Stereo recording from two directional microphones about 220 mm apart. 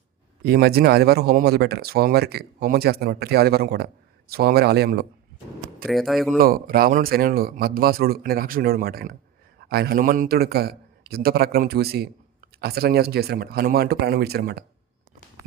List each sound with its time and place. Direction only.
0.4 s a man's voice: 45° right (ahead or behind)
5.9 s speech: centre (ahead or behind)
6.4 s a man's voice: 40° right (ahead or behind)